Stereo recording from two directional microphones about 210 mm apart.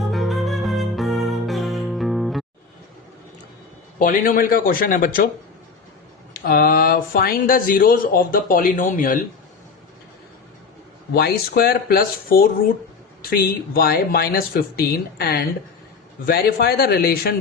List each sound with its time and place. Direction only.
0.1 s music: centre (ahead or behind)
3.9 s speech: 40° left (ahead or behind)
6.3 s speech: 45° left (ahead or behind)
11.1 s speech: 45° left (ahead or behind)